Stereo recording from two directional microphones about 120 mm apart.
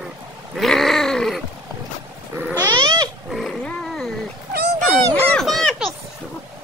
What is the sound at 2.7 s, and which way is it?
Cat, 35° right (ahead or behind).